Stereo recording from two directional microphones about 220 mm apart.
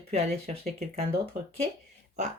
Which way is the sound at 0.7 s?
25° right (ahead or behind).